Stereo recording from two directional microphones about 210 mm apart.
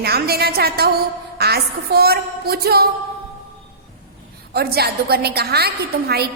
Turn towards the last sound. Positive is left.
turn(degrees=-50)  # may be behind; listen again after turning